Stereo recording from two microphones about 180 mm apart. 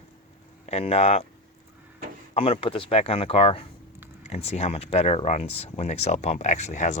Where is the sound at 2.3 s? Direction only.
30° left (ahead or behind).